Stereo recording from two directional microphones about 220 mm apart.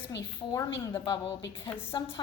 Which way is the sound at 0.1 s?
15° left (ahead or behind).